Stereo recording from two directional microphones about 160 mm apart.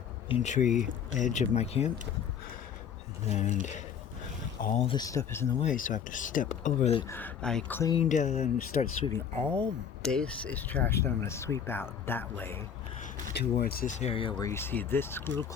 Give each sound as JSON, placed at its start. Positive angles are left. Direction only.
{"t": 0.3, "sound": "speech", "side_deg": 45}
{"t": 3.2, "sound": "speech", "side_deg": 45}
{"t": 4.8, "sound": "speech", "side_deg": 35}
{"t": 5.0, "sound": "speech", "side_deg": 15}
{"t": 5.6, "sound": "speech", "side_deg": 55}
{"t": 7.1, "sound": "speech", "side_deg": 10}
{"t": 8.0, "sound": "speech", "side_deg": 50}
{"t": 9.1, "sound": "speech", "side_deg": 5}
{"t": 13.3, "sound": "speech", "side_deg": 70}
{"t": 14.0, "sound": "speech", "side_deg": 35}
{"t": 14.4, "sound": "speech", "side_deg": 15}